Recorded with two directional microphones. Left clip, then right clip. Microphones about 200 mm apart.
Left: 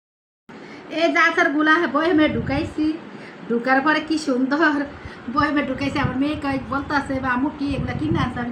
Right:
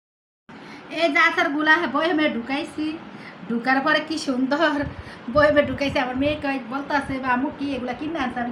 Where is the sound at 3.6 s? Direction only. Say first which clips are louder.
Left 1 dB; 45° right (ahead or behind).